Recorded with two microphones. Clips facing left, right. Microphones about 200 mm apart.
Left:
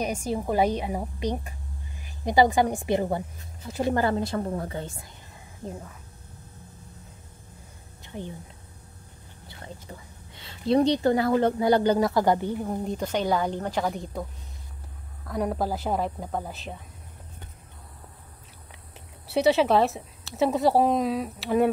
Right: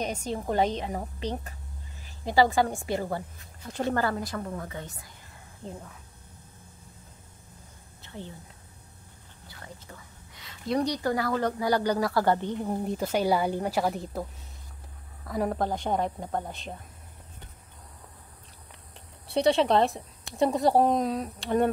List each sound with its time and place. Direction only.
0.0 s a woman's voice: 10° left (ahead or behind); by 5.1 s 25° left (ahead or behind)
5.7 s speech: centre (ahead or behind)
8.0 s speech: 15° left (ahead or behind)
9.5 s a woman's voice: 25° left (ahead or behind)
12.7 s a woman's voice: 5° right (ahead or behind)
15.2 s speech: centre (ahead or behind)
19.2 s speech: 5° left (ahead or behind)